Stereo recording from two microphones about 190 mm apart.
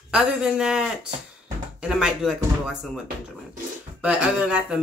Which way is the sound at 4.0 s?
5° right (ahead or behind).